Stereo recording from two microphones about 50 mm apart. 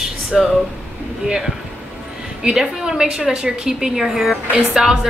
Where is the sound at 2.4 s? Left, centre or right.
Centre.